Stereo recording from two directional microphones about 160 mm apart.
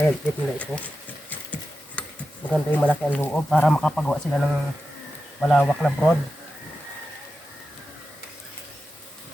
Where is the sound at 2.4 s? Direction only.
10° left (ahead or behind).